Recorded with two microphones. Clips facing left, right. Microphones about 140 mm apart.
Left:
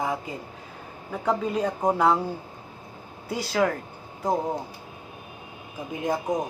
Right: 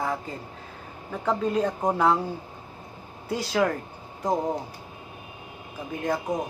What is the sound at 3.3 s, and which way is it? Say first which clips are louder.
Speech: even; 5° left (ahead or behind).